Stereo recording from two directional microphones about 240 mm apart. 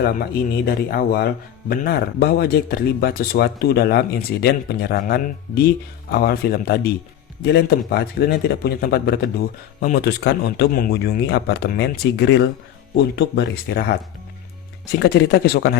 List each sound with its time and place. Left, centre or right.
0.0 s speech: left